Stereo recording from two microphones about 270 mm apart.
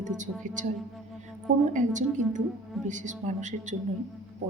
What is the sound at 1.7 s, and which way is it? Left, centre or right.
A woman's voice, right.